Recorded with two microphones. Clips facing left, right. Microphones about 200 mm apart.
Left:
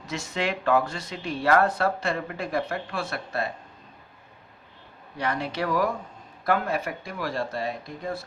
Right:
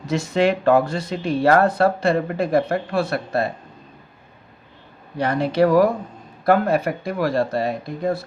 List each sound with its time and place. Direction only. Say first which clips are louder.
0.0 s speech: right 10 dB; 35° right (ahead or behind)
5.1 s speech: right 9 dB; 30° right (ahead or behind)
6.7 s speech: right 9 dB; 65° right (ahead or behind)
7.3 s speech: right 7 dB; 40° right (ahead or behind)